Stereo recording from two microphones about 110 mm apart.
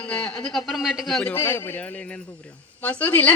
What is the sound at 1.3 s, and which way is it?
A man's voice, 20° left (ahead or behind).